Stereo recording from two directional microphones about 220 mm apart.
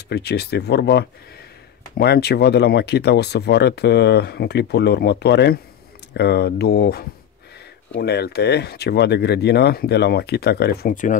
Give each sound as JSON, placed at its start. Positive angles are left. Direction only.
{"t": 0.1, "sound": "speech", "side_deg": 50}